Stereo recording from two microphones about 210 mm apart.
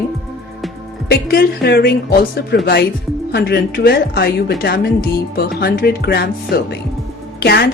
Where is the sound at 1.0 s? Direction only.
50° left (ahead or behind).